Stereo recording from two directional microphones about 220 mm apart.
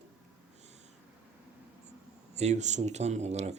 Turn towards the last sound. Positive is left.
turn(degrees=-30)  # may be behind; listen again after turning